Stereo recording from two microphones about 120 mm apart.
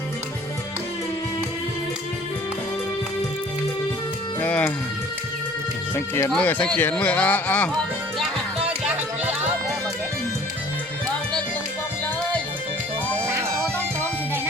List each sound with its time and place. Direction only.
4.4 s music: 15° left (ahead or behind)
6.3 s speech: 10° left (ahead or behind)